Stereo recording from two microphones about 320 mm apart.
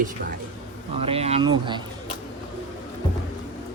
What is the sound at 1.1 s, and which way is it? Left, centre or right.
Speech, centre.